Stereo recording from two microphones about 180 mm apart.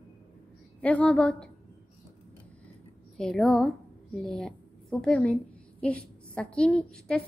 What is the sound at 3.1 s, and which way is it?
A woman's voice, 5° left (ahead or behind).